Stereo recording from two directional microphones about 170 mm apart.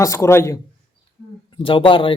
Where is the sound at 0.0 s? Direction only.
15° left (ahead or behind).